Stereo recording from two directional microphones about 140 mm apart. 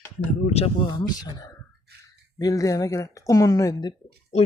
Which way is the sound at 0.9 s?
30° left (ahead or behind).